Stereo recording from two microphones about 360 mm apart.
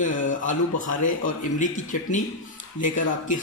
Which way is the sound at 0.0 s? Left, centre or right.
Left.